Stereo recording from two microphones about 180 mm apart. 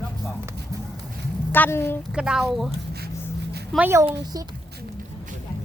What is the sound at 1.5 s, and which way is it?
Speech, 10° left (ahead or behind).